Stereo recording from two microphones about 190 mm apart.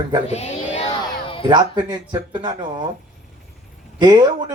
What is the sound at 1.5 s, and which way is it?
Speech, 20° right (ahead or behind).